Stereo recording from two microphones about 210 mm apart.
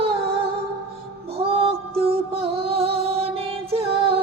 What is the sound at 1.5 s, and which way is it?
Mantra, 25° right (ahead or behind).